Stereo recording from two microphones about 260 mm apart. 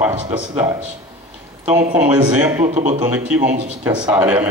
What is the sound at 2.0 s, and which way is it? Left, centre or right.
Speech, centre.